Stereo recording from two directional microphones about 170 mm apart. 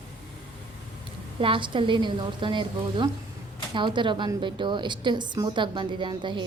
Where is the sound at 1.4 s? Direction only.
30° right (ahead or behind).